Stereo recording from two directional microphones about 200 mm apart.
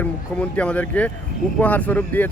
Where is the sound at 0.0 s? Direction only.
5° left (ahead or behind).